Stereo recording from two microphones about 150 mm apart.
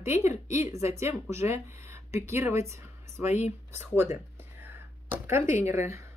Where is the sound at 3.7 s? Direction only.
15° right (ahead or behind).